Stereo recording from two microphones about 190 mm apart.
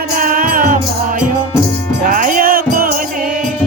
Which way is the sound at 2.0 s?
45° right (ahead or behind).